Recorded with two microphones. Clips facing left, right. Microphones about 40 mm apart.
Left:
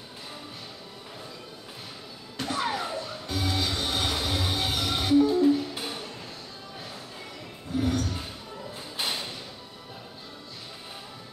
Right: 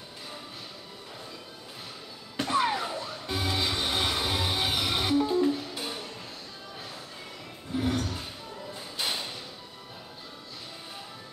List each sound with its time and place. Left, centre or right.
2.5 s a sound: centre
2.8 s music: centre
3.3 s music: right
5.3 s music: centre
7.7 s a sound: centre
9.0 s thump: centre